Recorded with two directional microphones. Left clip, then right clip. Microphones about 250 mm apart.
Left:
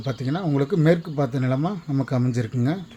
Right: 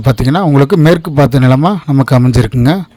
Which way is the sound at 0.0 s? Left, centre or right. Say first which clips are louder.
Right 15 dB; right.